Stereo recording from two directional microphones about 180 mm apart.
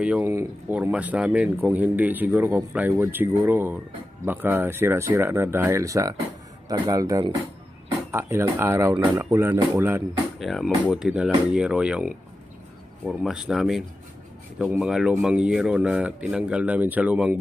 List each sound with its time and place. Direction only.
0.0 s speech: 5° right (ahead or behind)
10.4 s speech: centre (ahead or behind)